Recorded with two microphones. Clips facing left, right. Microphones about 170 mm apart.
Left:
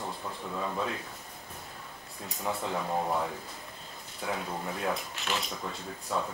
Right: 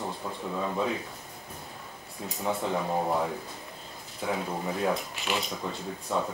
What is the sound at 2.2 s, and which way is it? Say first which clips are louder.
Speech: right 4 dB; centre (ahead or behind).